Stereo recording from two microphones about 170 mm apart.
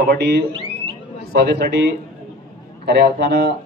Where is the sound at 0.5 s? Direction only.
30° right (ahead or behind).